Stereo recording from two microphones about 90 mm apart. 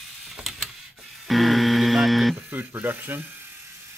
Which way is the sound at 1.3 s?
Centre (ahead or behind).